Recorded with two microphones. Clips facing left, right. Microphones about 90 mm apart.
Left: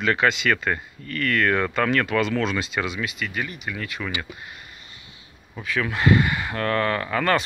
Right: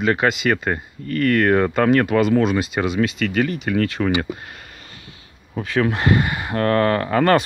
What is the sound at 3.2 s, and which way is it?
Speech, 70° right (ahead or behind).